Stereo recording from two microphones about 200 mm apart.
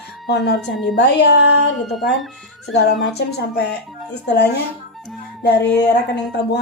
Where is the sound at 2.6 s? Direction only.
55° left (ahead or behind).